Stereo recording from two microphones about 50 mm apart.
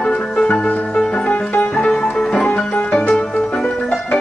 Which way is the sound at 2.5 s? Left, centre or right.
Left.